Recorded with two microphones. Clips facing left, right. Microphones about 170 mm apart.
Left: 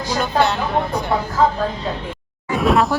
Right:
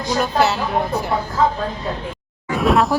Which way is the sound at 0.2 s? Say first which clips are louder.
Even; 5° right (ahead or behind).